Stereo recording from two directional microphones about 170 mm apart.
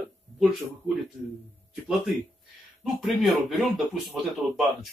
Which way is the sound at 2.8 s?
Centre (ahead or behind).